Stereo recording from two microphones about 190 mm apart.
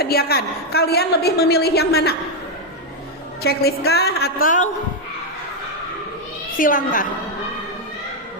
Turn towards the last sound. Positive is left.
turn(degrees=45)  # may be behind; listen again after turning